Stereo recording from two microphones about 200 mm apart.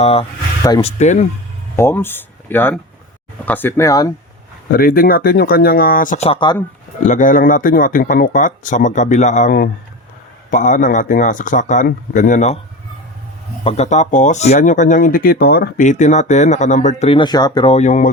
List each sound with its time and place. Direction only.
0.0 s speech: 30° left (ahead or behind)
1.7 s speech: 10° left (ahead or behind)
4.7 s speech: 45° left (ahead or behind)
6.2 s speech: 25° left (ahead or behind)
7.0 s speech: 40° left (ahead or behind)
13.7 s speech: 35° left (ahead or behind); by 15.9 s 50° left (ahead or behind)
15.9 s speech: 35° left (ahead or behind)